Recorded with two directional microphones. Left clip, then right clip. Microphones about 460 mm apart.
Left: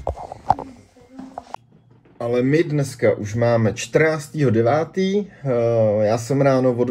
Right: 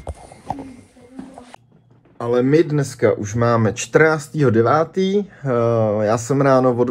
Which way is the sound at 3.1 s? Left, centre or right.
Centre.